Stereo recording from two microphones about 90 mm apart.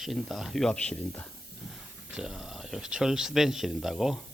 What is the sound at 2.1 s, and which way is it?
Speech, 5° right (ahead or behind).